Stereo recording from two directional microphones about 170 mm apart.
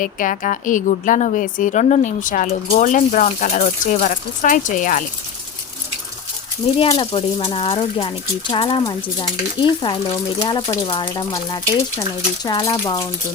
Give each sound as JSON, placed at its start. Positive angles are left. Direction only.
{"t": 0.0, "sound": "a woman's voice", "side_deg": 50}
{"t": 6.7, "sound": "speech", "side_deg": 35}